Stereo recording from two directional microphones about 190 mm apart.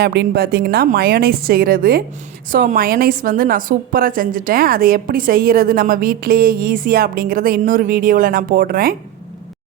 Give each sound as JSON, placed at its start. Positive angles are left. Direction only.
{"t": 0.0, "sound": "a woman's voice", "side_deg": -60}